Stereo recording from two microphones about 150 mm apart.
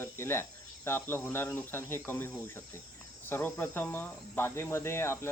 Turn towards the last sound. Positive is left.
turn(degrees=15)  # may be behind; listen again after turning